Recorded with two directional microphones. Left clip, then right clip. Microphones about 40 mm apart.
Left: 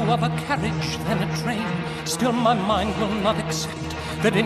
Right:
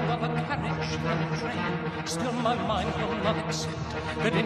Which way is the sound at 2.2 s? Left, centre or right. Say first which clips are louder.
Left 8 dB; right.